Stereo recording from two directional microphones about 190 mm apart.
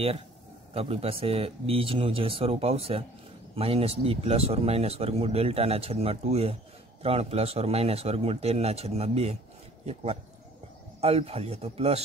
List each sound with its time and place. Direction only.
0.7 s speech: 30° right (ahead or behind)
11.0 s speech: 35° right (ahead or behind)